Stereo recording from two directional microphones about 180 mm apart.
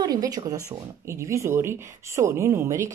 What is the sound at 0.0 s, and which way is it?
Speech, 20° right (ahead or behind).